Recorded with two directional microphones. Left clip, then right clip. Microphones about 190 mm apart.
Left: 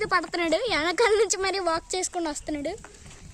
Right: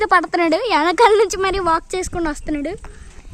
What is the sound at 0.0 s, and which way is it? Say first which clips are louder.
A woman's voice: right 10 dB; 35° right (ahead or behind).